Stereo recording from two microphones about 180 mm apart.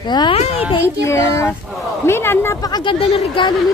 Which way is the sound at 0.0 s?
25° left (ahead or behind).